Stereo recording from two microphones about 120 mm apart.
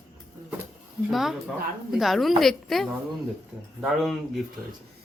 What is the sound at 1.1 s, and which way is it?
Speech, centre (ahead or behind).